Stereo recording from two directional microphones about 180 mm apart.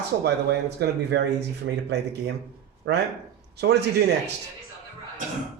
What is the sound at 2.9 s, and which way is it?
Speech, 85° right.